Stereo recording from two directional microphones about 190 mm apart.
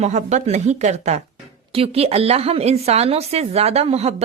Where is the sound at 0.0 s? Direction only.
35° right (ahead or behind).